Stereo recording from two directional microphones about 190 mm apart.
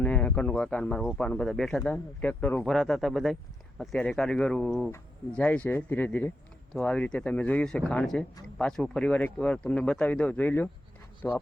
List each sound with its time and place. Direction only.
0.0 s speech: 10° left (ahead or behind)